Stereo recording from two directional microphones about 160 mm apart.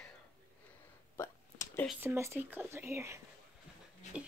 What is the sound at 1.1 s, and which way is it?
Hiccup, 15° left (ahead or behind).